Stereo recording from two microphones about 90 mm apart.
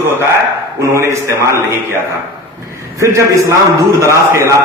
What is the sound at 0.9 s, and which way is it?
Speech, 35° right (ahead or behind).